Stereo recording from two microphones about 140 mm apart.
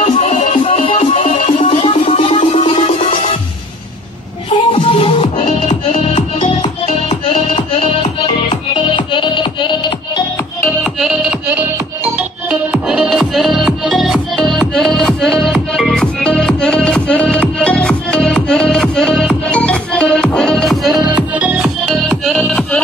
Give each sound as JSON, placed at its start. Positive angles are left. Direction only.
{"t": 0.0, "sound": "music", "side_deg": 50}
{"t": 0.7, "sound": "music", "side_deg": 40}
{"t": 1.2, "sound": "music", "side_deg": 65}
{"t": 1.7, "sound": "music", "side_deg": 40}
{"t": 4.7, "sound": "music", "side_deg": 40}
{"t": 5.2, "sound": "music", "side_deg": 50}
{"t": 10.6, "sound": "music", "side_deg": 0}
{"t": 12.8, "sound": "music", "side_deg": -5}
{"t": 21.8, "sound": "music", "side_deg": 0}